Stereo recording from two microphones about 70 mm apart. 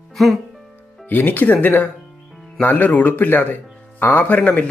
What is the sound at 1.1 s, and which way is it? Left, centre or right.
Speech, left.